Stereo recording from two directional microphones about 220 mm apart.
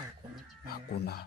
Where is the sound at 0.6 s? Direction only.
45° left (ahead or behind).